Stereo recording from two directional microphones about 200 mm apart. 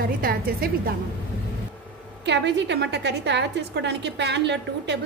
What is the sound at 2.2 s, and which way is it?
A woman's voice, 60° right (ahead or behind).